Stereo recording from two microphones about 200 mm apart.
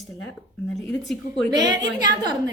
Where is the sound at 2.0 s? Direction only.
20° right (ahead or behind).